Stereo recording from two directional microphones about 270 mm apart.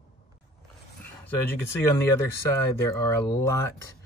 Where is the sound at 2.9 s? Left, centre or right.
Centre.